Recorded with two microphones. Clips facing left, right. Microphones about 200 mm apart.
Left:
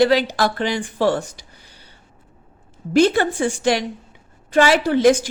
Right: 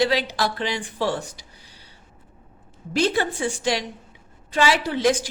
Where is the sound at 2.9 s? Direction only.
50° left (ahead or behind).